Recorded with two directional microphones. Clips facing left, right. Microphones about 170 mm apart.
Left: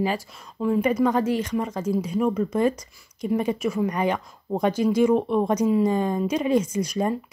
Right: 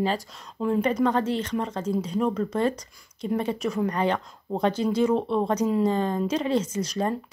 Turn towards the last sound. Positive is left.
turn(degrees=10)  # may be behind; listen again after turning